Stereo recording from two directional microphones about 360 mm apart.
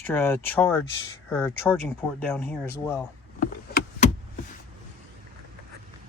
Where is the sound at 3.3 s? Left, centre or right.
Left.